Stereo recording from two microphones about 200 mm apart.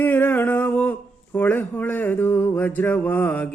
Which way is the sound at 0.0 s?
10° left (ahead or behind).